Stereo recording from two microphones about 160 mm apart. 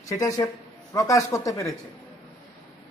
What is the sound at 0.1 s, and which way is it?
A man's voice, 20° left (ahead or behind).